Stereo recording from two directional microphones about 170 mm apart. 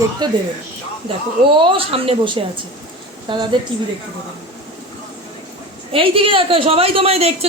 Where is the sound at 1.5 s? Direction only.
30° right (ahead or behind).